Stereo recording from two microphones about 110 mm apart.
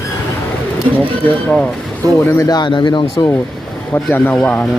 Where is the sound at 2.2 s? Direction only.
20° left (ahead or behind).